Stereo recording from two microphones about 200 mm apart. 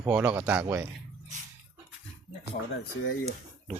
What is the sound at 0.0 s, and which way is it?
Speech, 10° right (ahead or behind).